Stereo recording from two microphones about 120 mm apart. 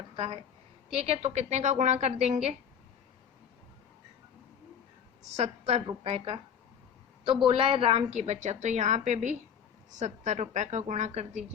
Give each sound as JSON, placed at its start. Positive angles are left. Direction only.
{"t": 0.9, "sound": "a woman's voice", "side_deg": -60}
{"t": 5.4, "sound": "a woman's voice", "side_deg": -65}
{"t": 7.4, "sound": "a woman's voice", "side_deg": -45}